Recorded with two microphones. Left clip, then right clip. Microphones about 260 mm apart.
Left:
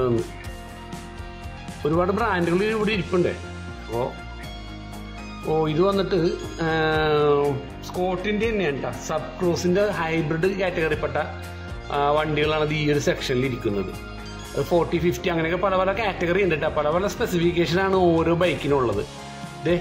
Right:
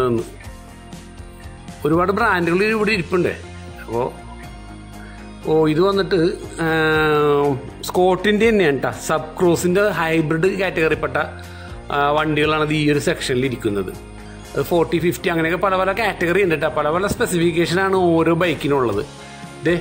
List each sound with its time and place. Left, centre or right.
0.0 s speech: centre
1.8 s speech: centre
3.9 s speech: centre
5.5 s speech: centre
7.8 s speech: right; by 19.8 s centre